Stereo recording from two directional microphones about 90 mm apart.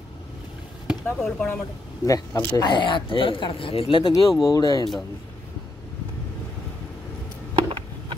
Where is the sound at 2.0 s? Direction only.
50° left (ahead or behind); by 4.1 s 80° left.